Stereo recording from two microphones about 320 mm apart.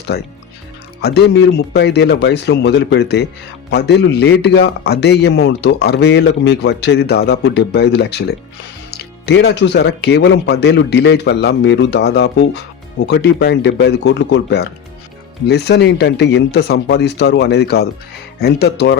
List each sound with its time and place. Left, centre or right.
0.1 s speech: left